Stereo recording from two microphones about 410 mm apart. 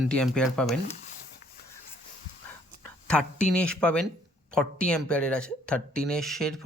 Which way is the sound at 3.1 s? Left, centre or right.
Centre.